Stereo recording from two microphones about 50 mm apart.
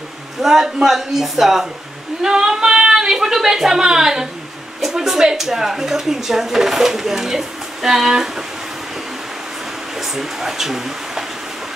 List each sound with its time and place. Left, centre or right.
0.4 s speech: centre
9.9 s speech: centre